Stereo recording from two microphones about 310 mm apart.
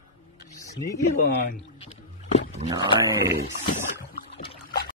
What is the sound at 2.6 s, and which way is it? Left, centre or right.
Speech, centre.